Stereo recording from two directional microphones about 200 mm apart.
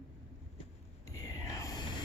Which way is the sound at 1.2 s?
15° left (ahead or behind).